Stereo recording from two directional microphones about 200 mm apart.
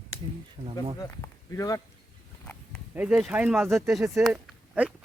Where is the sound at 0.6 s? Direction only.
35° right (ahead or behind).